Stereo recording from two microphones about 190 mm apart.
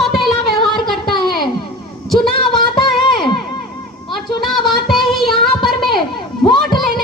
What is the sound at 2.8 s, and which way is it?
Music, 25° left (ahead or behind).